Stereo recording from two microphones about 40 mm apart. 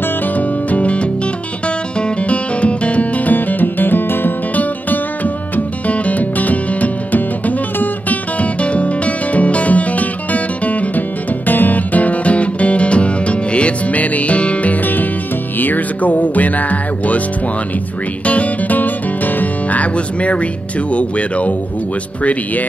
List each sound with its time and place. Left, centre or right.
0.4 s music: left
3.3 s music: left
4.6 s music: left
18.2 s music: left
18.8 s music: left
20.9 s speech: left